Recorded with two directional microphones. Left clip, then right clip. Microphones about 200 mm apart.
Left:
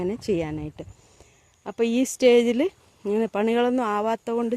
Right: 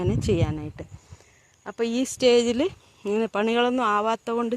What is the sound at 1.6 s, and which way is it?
Speech, 30° left (ahead or behind).